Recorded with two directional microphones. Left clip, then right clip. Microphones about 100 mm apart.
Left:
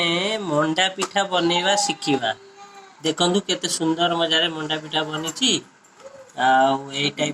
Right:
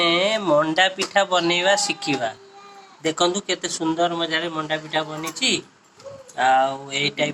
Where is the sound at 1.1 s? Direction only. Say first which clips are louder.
Even; 30° left (ahead or behind).